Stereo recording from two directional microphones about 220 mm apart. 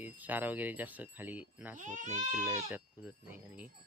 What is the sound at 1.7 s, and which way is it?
Speech, 35° right (ahead or behind).